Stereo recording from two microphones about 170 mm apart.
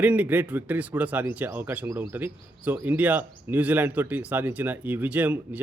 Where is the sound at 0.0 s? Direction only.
10° right (ahead or behind).